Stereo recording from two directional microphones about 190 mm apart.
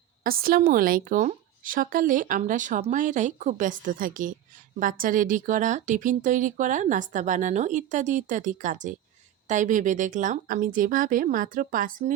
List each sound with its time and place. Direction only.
0.3 s speech: 50° right (ahead or behind)